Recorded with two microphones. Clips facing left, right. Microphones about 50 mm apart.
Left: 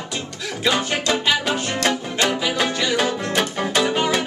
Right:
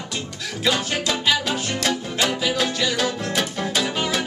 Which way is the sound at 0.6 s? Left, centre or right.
Centre.